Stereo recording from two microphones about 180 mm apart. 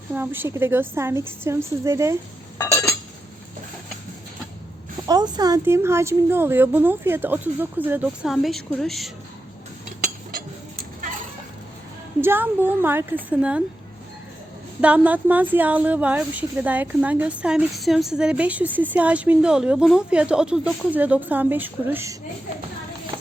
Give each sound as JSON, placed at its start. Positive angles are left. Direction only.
{"t": 0.1, "sound": "speech", "side_deg": -10}
{"t": 2.6, "sound": "chink", "side_deg": 15}
{"t": 5.0, "sound": "speech", "side_deg": -20}
{"t": 12.2, "sound": "speech", "side_deg": -10}
{"t": 14.8, "sound": "speech", "side_deg": -5}